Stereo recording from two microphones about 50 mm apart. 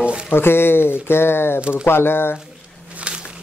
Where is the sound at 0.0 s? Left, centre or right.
Right.